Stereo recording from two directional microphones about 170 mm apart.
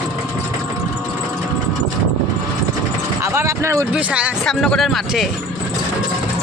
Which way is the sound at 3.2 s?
15° right (ahead or behind).